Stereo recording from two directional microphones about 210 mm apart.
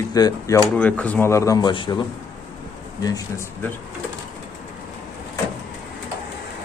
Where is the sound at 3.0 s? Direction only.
15° left (ahead or behind).